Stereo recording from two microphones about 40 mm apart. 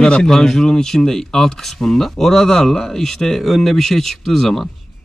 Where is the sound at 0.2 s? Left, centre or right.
Centre.